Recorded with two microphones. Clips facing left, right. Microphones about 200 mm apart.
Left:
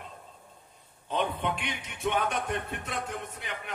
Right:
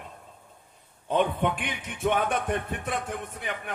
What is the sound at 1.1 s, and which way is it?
A man's voice, 50° right (ahead or behind).